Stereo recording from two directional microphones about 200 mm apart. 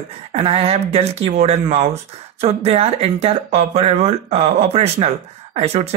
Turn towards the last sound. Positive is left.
turn(degrees=-30)  # may be behind; listen again after turning